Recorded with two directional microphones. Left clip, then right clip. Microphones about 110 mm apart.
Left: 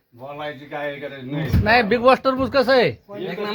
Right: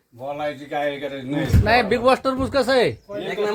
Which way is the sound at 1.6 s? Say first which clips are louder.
Left 2 dB; 20° left (ahead or behind).